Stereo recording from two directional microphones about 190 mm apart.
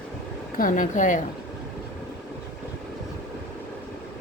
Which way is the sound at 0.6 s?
45° left (ahead or behind).